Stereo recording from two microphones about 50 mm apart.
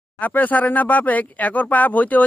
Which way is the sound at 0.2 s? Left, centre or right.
Left.